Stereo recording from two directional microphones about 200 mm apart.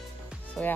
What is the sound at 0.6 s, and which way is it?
Speech, 5° left (ahead or behind).